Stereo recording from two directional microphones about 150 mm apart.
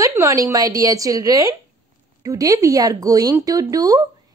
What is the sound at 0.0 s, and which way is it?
Speech, 20° right (ahead or behind).